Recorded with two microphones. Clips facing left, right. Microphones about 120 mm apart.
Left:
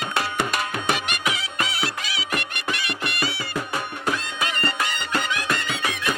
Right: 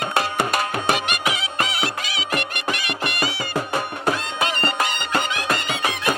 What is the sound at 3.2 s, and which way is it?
Music, 20° right (ahead or behind).